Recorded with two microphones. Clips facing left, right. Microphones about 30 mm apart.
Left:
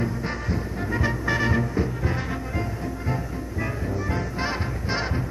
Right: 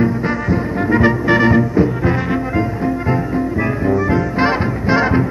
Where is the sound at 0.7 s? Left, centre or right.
Right.